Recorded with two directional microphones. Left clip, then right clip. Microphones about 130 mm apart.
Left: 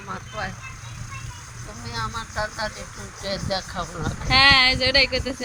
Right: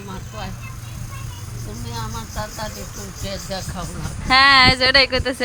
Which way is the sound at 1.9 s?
35° left (ahead or behind).